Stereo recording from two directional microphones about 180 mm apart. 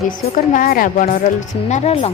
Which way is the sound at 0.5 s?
50° left (ahead or behind).